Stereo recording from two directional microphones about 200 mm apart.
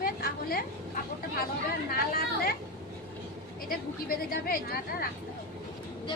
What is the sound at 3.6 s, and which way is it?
A woman's voice, 45° left (ahead or behind).